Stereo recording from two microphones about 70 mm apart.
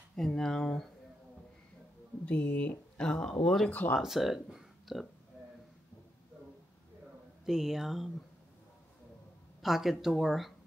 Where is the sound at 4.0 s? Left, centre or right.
Centre.